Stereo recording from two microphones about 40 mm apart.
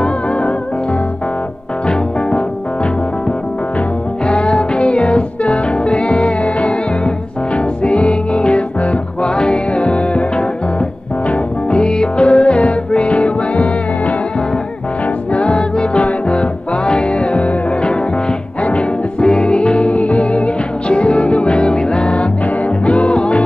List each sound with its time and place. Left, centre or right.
4.3 s music: left
15.3 s music: left